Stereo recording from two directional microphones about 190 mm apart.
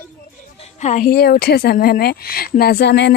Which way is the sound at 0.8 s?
45° left (ahead or behind).